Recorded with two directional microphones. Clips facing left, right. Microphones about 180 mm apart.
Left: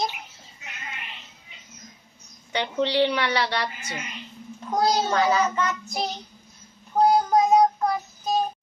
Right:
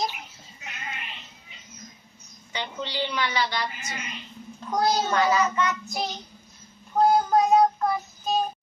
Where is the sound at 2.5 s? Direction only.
65° left (ahead or behind).